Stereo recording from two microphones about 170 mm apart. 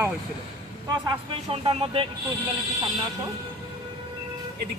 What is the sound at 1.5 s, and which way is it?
Speech, 35° right (ahead or behind).